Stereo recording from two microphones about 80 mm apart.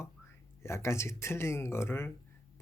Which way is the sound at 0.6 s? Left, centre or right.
Left.